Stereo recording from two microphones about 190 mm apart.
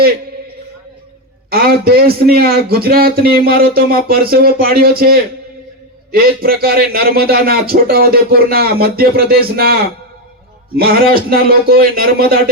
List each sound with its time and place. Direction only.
1.5 s a man's voice: 50° right (ahead or behind)
10.8 s a man's voice: 50° right (ahead or behind)